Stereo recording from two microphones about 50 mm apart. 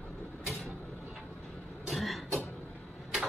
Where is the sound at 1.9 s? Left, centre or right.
Centre.